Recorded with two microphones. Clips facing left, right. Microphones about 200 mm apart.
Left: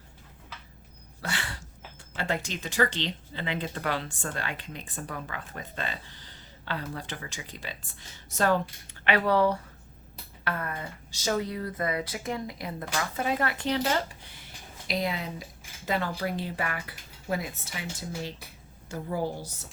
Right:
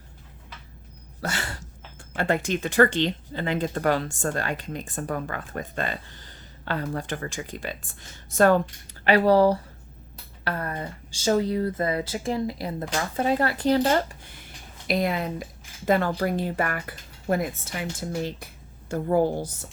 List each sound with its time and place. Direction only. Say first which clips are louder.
1.2 s a sound: right 4 dB; 45° right (ahead or behind)
2.1 s speech: right 7 dB; 55° right (ahead or behind)
9.0 s speech: right 6 dB; 35° right (ahead or behind)
14.8 s speech: right 6 dB; 55° right (ahead or behind)